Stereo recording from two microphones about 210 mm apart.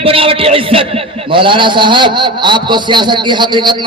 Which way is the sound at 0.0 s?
25° right (ahead or behind).